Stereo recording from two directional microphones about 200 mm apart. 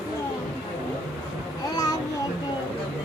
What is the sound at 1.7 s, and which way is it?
Child singing, 20° left (ahead or behind).